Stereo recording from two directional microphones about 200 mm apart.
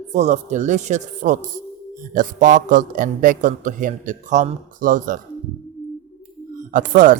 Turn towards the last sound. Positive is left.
turn(degrees=-40)  # may be behind; listen again after turning